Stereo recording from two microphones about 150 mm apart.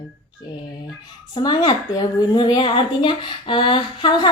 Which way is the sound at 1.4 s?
30° left (ahead or behind).